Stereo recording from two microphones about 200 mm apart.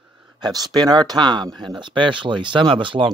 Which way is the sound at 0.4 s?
20° right (ahead or behind).